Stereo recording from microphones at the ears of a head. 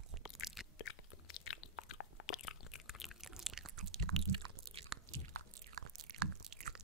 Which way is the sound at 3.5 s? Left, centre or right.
Right.